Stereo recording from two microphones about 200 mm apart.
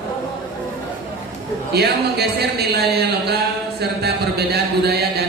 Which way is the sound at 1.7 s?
55° right (ahead or behind).